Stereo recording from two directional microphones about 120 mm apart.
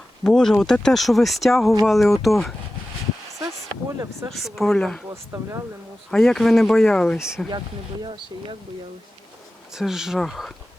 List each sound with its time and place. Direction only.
0.3 s speech: 5° left (ahead or behind)
3.4 s speech: 25° right (ahead or behind)
4.3 s speech: centre (ahead or behind)
5.0 s speech: 25° right (ahead or behind)
6.1 s speech: centre (ahead or behind)
8.0 s speech: 45° right (ahead or behind)
9.7 s speech: 5° right (ahead or behind)